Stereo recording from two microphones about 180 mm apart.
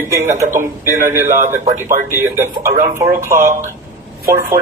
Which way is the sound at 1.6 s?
45° right (ahead or behind).